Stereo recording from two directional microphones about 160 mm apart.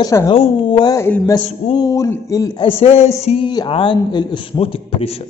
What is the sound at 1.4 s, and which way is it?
Speech, 35° left (ahead or behind).